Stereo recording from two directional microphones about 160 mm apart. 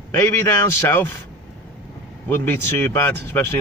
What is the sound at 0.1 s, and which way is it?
Speech, 15° left (ahead or behind).